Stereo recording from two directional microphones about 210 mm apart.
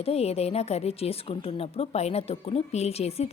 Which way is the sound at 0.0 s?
30° left (ahead or behind).